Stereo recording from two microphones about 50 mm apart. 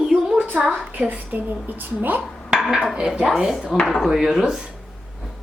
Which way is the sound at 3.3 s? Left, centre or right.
Centre.